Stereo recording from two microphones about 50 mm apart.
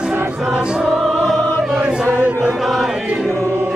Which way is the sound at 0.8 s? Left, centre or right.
Centre.